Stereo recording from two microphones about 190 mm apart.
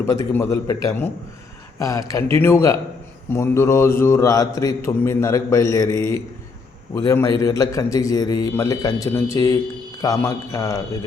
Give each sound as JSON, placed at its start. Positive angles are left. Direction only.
{"t": 0.0, "sound": "a man's voice", "side_deg": 15}